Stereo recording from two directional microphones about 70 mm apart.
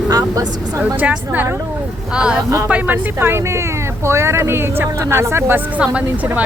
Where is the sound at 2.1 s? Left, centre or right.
Centre; by 5.6 s right.